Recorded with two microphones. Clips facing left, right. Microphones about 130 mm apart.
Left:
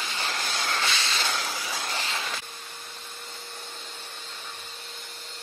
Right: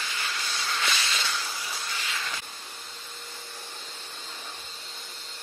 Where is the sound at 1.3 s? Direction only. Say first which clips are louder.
Left 3 dB; 85° left.